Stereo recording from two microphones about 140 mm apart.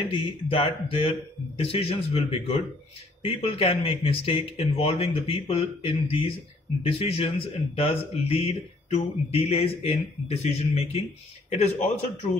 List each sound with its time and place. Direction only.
0.1 s speech: 40° left (ahead or behind)